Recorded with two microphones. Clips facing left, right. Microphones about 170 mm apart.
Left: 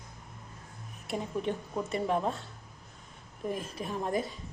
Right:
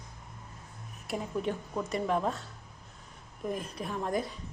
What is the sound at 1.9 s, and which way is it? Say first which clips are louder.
Speech: even; 30° left (ahead or behind).